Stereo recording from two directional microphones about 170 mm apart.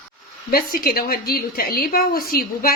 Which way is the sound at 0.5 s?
60° left (ahead or behind).